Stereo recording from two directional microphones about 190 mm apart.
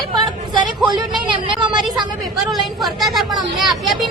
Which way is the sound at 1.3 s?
25° right (ahead or behind).